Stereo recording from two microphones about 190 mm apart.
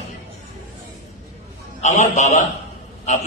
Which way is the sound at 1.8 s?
40° left (ahead or behind).